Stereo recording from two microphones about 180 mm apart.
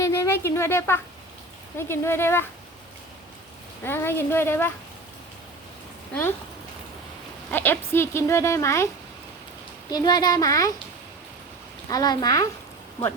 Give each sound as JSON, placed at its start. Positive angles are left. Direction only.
{"t": 0.0, "sound": "a woman's voice", "side_deg": 15}
{"t": 3.8, "sound": "speech", "side_deg": 15}
{"t": 7.5, "sound": "speech", "side_deg": 10}
{"t": 9.9, "sound": "speech", "side_deg": 20}
{"t": 11.9, "sound": "speech", "side_deg": 20}